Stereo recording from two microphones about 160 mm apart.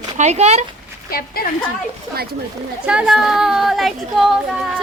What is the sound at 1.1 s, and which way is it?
Speech, 70° left (ahead or behind).